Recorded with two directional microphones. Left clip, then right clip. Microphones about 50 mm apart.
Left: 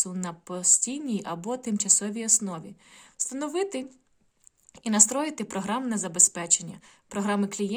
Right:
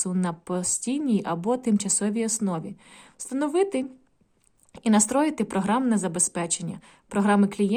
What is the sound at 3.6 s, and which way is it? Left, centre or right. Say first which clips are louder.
Speech: right 5 dB; right.